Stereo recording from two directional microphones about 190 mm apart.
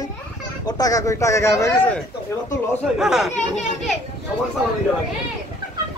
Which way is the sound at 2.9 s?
Centre (ahead or behind).